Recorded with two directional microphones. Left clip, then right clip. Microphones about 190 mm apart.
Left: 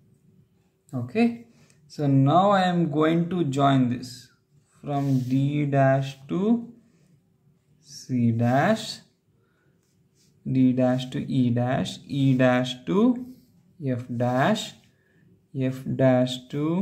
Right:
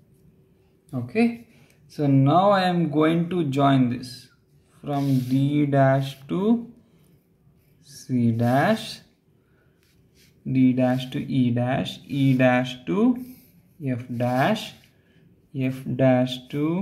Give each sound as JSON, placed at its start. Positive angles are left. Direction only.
{"t": 0.8, "sound": "speech", "side_deg": -20}
{"t": 5.3, "sound": "speech", "side_deg": -15}
{"t": 8.1, "sound": "speech", "side_deg": -15}
{"t": 10.4, "sound": "speech", "side_deg": 0}
{"t": 15.5, "sound": "speech", "side_deg": -5}